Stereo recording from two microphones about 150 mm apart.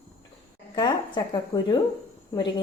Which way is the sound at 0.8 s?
30° left (ahead or behind).